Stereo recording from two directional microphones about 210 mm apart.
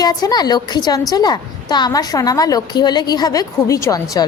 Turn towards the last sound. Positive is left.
turn(degrees=15)  # may be behind; listen again after turning